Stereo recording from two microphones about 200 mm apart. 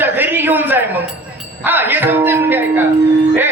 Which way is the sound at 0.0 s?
10° right (ahead or behind).